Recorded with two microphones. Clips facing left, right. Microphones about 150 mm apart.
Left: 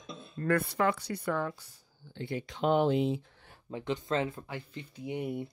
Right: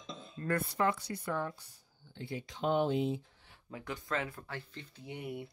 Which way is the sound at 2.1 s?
70° left (ahead or behind).